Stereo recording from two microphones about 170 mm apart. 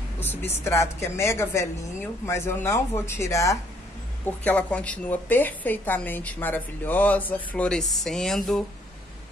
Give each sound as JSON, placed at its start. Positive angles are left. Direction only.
{"t": 0.2, "sound": "a woman's voice", "side_deg": 10}